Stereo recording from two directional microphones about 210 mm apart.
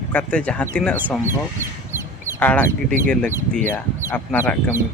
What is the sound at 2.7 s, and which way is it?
Speech, 45° right (ahead or behind).